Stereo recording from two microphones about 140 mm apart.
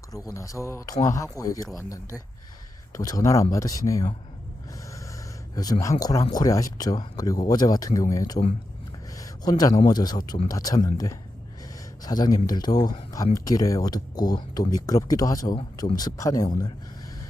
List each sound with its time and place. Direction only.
0.1 s speech: 25° left (ahead or behind)
2.9 s speech: 25° left (ahead or behind)
5.8 s a man's voice: 25° left (ahead or behind)